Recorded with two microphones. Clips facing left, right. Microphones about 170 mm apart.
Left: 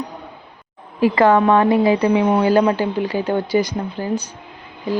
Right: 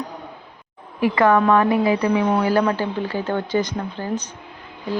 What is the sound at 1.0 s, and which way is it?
A woman's voice, 30° left (ahead or behind).